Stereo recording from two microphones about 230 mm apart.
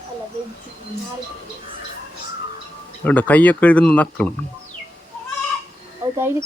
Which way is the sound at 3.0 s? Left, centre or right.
Centre.